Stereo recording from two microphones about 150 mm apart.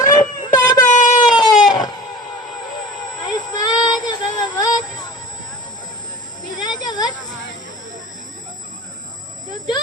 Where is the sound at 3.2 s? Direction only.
25° left (ahead or behind).